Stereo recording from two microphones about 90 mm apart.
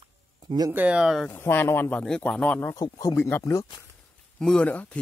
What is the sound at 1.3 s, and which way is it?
Speech, 25° left (ahead or behind).